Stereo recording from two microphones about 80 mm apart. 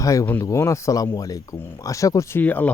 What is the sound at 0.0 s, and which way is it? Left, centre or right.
Speech, left.